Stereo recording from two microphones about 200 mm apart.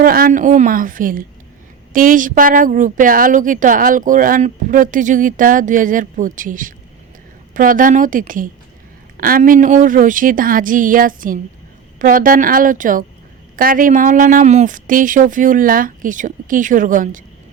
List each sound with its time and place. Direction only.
0.0 s a woman's voice: 45° right (ahead or behind)